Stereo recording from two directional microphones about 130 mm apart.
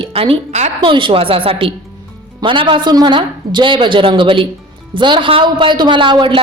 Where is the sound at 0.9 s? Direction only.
40° right (ahead or behind).